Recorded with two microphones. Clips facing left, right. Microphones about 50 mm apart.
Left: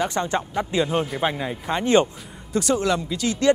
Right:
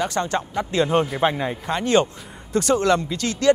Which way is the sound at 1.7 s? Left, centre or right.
Centre.